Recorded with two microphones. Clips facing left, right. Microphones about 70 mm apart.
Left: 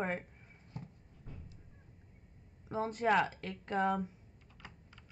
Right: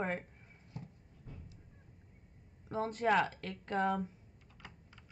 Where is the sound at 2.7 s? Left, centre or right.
Centre.